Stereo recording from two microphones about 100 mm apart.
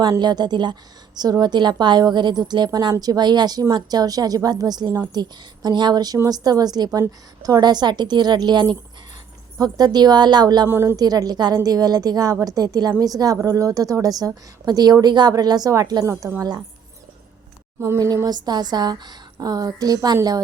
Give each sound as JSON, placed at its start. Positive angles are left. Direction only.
{"t": 0.2, "sound": "a woman's voice", "side_deg": -45}
{"t": 10.7, "sound": "speech", "side_deg": -25}
{"t": 10.9, "sound": "a woman's voice", "side_deg": -40}
{"t": 17.7, "sound": "a woman's voice", "side_deg": -30}